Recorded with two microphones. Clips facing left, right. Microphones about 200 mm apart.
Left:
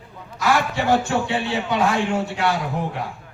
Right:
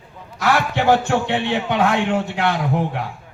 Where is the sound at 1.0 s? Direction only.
60° right (ahead or behind).